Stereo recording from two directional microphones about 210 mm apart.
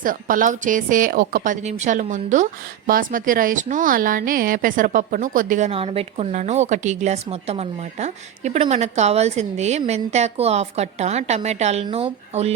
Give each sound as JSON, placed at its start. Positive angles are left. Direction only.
{"t": 0.0, "sound": "a woman's voice", "side_deg": -40}